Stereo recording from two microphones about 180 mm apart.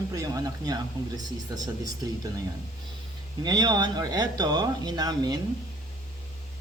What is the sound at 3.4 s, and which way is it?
Speech, 25° right (ahead or behind).